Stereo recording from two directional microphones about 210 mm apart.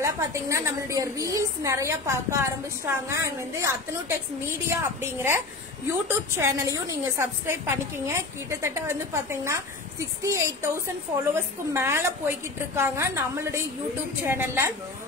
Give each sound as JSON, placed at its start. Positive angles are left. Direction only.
{"t": 0.0, "sound": "a woman's voice", "side_deg": -15}